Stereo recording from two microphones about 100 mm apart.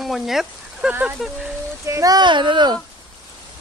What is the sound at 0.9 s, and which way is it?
Speech, 15° right (ahead or behind).